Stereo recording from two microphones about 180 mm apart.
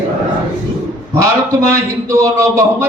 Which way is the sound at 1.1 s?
15° right (ahead or behind).